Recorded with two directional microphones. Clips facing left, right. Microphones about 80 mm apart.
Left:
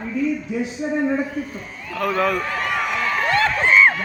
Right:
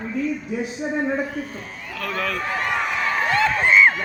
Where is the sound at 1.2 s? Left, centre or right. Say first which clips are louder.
Left 2 dB; right.